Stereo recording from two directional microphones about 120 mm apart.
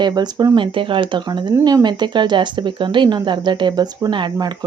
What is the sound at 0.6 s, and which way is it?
Speech, 45° right (ahead or behind).